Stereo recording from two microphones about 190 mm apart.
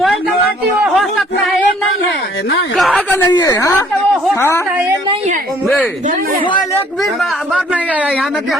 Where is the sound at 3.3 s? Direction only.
20° left (ahead or behind).